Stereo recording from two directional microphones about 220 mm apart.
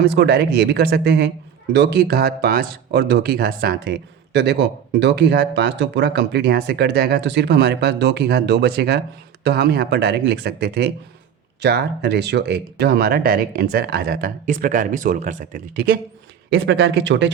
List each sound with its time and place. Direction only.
0.0 s speech: 50° right (ahead or behind)
16.6 s speech: 55° right (ahead or behind)